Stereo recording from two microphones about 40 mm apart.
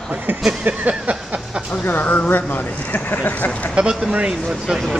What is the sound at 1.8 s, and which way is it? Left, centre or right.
Speech, left.